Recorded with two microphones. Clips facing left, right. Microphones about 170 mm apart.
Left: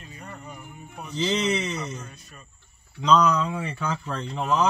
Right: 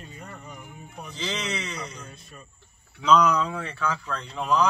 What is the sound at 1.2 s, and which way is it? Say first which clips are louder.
Speech: left 7 dB; 25° left (ahead or behind).